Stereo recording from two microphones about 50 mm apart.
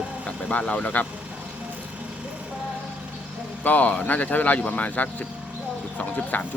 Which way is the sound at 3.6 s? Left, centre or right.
Left.